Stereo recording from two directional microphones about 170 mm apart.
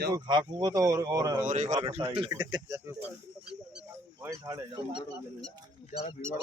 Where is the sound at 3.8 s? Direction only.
15° right (ahead or behind).